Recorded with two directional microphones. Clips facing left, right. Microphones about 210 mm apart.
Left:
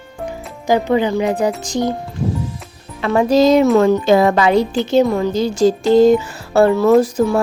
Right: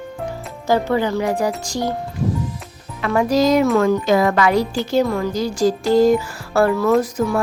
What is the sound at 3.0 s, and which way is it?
Speech, 25° left (ahead or behind).